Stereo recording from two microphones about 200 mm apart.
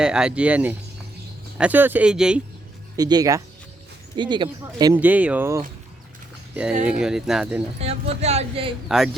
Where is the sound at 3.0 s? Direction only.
20° right (ahead or behind).